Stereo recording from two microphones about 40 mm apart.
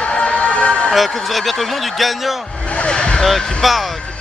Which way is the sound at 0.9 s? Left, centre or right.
Centre.